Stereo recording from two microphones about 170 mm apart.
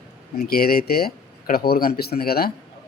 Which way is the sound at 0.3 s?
65° left (ahead or behind).